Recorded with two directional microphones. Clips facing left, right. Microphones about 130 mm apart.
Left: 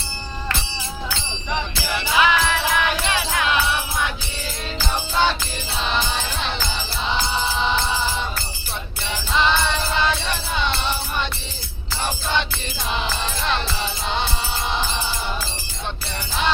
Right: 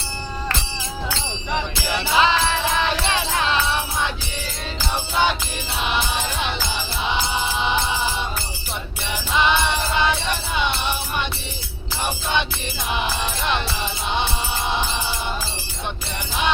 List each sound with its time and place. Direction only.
2.0 s music: 25° right (ahead or behind)
9.3 s music: 15° right (ahead or behind)